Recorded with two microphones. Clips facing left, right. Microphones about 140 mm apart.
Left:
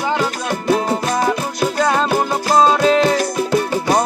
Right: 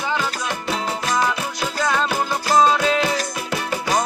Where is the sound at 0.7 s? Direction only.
50° left (ahead or behind).